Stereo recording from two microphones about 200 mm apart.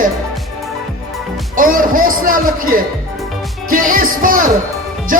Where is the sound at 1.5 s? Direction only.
45° right (ahead or behind).